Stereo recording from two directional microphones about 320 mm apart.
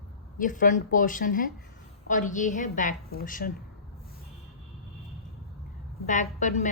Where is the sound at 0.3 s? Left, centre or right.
Left.